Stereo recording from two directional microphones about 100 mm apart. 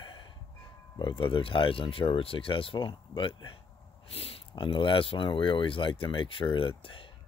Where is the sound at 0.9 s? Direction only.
50° left (ahead or behind).